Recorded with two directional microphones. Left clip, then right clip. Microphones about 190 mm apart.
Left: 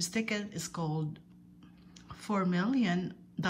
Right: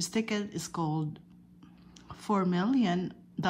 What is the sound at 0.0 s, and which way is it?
Speech, 20° right (ahead or behind).